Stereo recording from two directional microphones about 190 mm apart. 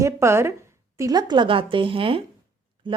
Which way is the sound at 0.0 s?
15° right (ahead or behind).